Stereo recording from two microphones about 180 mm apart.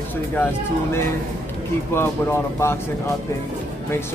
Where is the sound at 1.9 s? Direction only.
15° left (ahead or behind).